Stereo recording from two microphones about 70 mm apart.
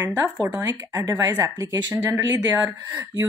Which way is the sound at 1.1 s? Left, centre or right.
Right.